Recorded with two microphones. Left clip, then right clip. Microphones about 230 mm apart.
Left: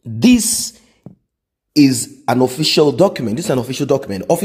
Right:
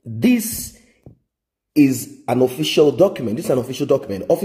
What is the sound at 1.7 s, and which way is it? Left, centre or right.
Speech, left.